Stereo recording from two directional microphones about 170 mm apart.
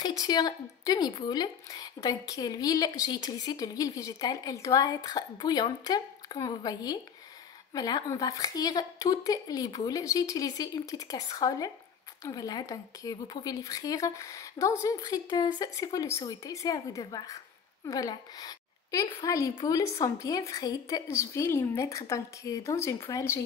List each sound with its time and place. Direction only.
0.0 s a woman's voice: 25° left (ahead or behind)